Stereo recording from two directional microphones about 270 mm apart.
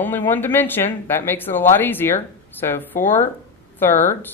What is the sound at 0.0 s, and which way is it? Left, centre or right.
A woman's voice, centre.